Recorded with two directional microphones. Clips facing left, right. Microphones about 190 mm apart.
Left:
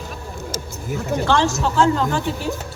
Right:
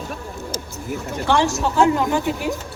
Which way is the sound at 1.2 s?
15° right (ahead or behind).